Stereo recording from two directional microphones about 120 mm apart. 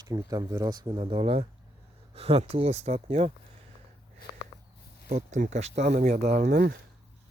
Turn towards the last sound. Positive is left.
turn(degrees=-70)  # may be behind; listen again after turning